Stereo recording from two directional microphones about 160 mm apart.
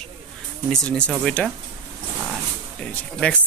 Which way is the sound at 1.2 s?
5° left (ahead or behind).